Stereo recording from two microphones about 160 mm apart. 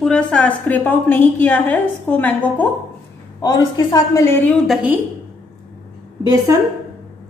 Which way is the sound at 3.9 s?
20° left (ahead or behind).